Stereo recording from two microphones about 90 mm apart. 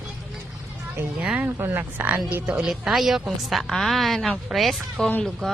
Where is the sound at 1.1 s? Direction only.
15° right (ahead or behind).